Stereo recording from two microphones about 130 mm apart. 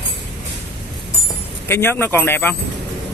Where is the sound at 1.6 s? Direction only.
15° left (ahead or behind).